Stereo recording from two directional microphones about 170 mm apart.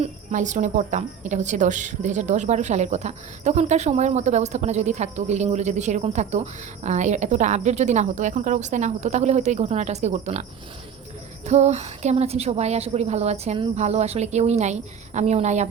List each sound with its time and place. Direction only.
0.0 s a woman's voice: 45° right (ahead or behind)
11.4 s a woman's voice: 40° right (ahead or behind)